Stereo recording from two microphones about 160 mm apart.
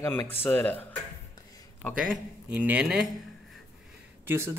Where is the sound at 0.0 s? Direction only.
15° left (ahead or behind).